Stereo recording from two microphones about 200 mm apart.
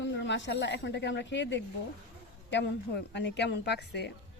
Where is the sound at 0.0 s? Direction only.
65° left (ahead or behind).